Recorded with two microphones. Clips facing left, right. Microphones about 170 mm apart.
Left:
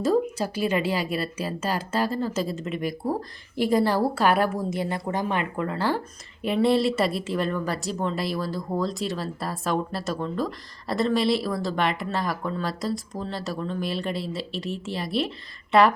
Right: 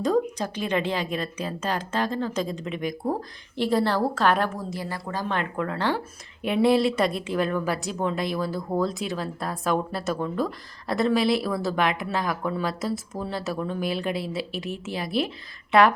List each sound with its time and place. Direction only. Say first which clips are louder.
0.0 s a woman's voice: left 1 dB; 5° left (ahead or behind)
4.7 s speech: left 4 dB; 20° left (ahead or behind)
5.3 s a woman's voice: left 1 dB; 5° left (ahead or behind)